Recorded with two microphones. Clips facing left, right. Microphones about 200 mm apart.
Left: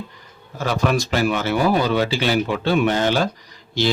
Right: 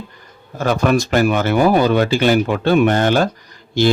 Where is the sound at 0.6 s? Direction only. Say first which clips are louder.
Right 5 dB; 50° right (ahead or behind).